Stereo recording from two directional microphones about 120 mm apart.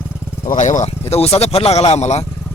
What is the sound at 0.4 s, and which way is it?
Speech, 90° left.